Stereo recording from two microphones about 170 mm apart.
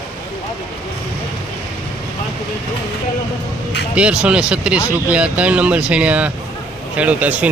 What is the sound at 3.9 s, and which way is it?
Speech, 5° right (ahead or behind).